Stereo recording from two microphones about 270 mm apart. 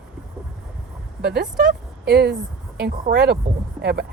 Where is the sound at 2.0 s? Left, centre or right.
Right.